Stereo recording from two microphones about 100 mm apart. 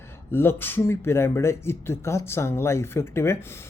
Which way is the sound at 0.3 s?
25° left (ahead or behind).